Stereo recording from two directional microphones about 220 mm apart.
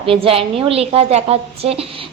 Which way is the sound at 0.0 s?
25° right (ahead or behind).